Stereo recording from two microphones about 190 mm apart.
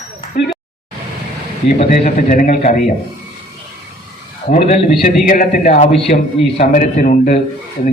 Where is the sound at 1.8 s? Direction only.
45° left (ahead or behind).